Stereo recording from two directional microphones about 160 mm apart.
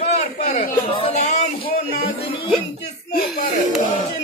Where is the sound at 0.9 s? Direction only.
40° left (ahead or behind).